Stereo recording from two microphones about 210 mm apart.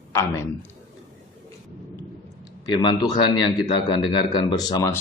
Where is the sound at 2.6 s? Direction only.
20° left (ahead or behind).